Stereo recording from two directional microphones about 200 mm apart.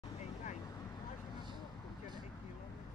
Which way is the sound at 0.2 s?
35° left (ahead or behind).